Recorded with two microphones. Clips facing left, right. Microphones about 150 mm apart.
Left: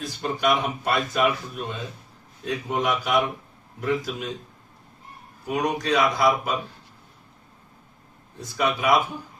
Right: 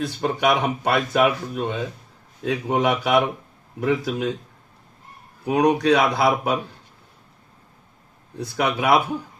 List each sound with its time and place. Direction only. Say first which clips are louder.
0.0 s a man's voice: right 4 dB; 65° right (ahead or behind)
5.5 s a man's voice: right 7 dB; 65° right (ahead or behind)
8.4 s speech: right 2 dB; 65° right (ahead or behind)